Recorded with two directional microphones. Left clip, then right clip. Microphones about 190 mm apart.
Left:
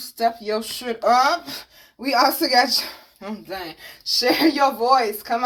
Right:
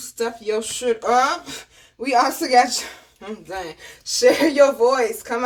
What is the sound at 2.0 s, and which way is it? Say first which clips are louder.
Speech: even; 30° left (ahead or behind).